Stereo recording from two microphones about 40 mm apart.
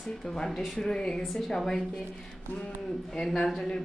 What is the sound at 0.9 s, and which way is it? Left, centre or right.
Speech, centre.